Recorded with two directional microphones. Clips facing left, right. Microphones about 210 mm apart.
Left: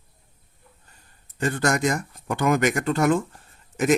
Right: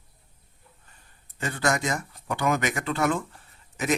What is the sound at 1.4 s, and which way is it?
A man's voice, 45° left (ahead or behind).